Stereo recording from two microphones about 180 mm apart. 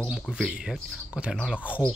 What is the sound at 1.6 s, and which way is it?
Speech, 10° left (ahead or behind).